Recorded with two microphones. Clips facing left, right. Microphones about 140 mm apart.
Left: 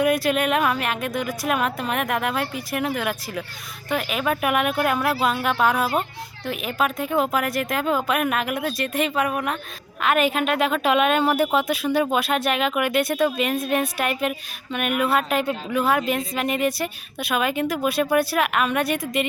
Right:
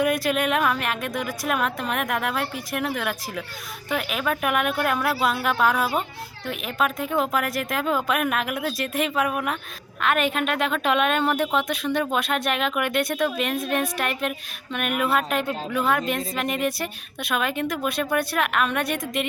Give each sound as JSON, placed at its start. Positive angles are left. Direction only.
{"t": 0.0, "sound": "a woman's voice", "side_deg": 0}